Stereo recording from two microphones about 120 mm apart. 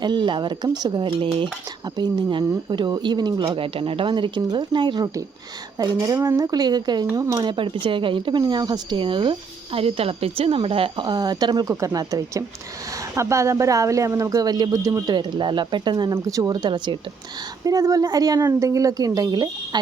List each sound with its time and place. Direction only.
0.0 s speech: 40° right (ahead or behind)
3.5 s speech: 50° right (ahead or behind); by 7.3 s 30° right (ahead or behind)
7.3 s speech: 45° right (ahead or behind)
9.7 s speech: 55° right (ahead or behind); by 11.7 s 35° right (ahead or behind)
11.7 s speech: 25° right (ahead or behind)